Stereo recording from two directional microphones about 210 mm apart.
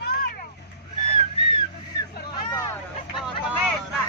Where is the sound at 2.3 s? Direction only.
20° left (ahead or behind).